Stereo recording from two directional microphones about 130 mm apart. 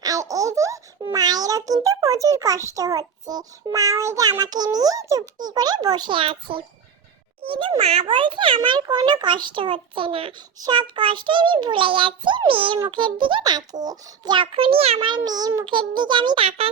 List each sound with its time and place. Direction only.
0.0 s baby laughter: 25° right (ahead or behind)
1.0 s a child's voice: 30° right (ahead or behind); by 15.1 s 50° right (ahead or behind)
15.1 s a child's voice: 30° right (ahead or behind); by 16.6 s 45° right (ahead or behind)